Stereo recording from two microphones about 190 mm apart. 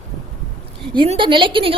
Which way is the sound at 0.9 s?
25° right (ahead or behind).